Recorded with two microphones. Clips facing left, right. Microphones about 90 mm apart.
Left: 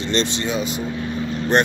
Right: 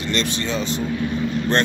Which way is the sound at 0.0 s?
25° left (ahead or behind).